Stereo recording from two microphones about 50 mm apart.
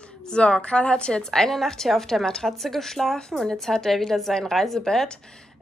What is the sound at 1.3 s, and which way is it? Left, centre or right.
A woman's voice, centre.